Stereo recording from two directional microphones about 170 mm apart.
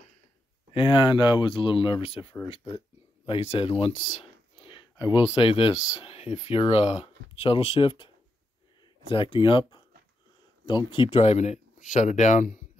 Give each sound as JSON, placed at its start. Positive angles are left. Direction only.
{"t": 0.7, "sound": "speech", "side_deg": 30}
{"t": 9.1, "sound": "speech", "side_deg": 30}